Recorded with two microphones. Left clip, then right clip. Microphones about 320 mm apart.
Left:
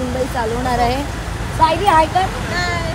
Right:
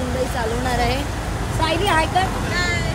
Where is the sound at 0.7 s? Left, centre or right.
Centre.